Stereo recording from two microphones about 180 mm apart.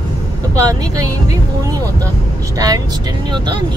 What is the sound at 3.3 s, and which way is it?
Speech, 25° right (ahead or behind).